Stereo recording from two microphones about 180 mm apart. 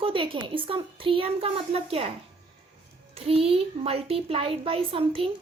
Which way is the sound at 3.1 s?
35° right (ahead or behind).